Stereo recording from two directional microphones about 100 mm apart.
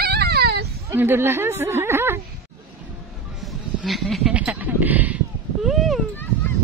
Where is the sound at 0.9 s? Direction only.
25° right (ahead or behind).